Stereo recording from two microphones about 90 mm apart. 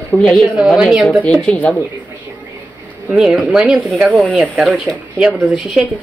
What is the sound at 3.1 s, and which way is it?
Speech, 5° right (ahead or behind).